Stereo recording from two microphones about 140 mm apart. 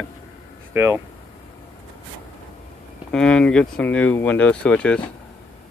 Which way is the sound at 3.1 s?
5° left (ahead or behind).